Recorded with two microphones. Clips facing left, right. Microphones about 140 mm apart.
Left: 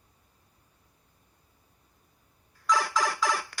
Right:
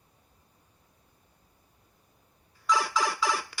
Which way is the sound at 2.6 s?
5° right (ahead or behind).